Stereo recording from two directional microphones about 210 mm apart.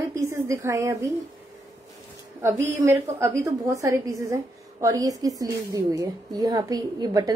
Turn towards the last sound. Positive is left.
turn(degrees=-20)  # may be behind; listen again after turning